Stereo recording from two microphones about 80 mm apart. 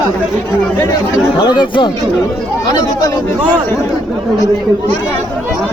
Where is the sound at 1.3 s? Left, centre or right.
Left.